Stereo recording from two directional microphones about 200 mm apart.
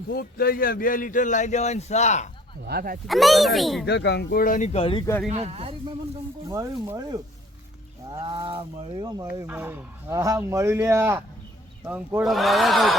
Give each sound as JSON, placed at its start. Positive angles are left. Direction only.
{"t": 0.1, "sound": "speech", "side_deg": 50}
{"t": 2.6, "sound": "speech", "side_deg": -50}
{"t": 3.1, "sound": "a man's voice", "side_deg": 0}
{"t": 3.8, "sound": "speech", "side_deg": 55}
{"t": 5.3, "sound": "cattle", "side_deg": -30}
{"t": 6.5, "sound": "speech", "side_deg": -15}
{"t": 8.1, "sound": "cattle", "side_deg": -25}
{"t": 9.5, "sound": "a man's voice", "side_deg": -10}